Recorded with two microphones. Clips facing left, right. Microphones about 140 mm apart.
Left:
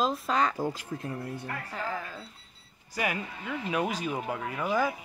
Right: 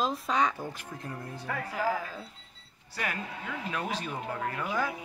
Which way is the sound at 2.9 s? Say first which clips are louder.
Left 4 dB; 10° left (ahead or behind).